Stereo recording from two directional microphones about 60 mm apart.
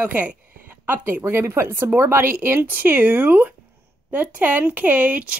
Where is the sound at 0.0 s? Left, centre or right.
Right.